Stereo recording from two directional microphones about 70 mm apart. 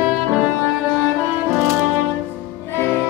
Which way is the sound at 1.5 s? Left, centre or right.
Right.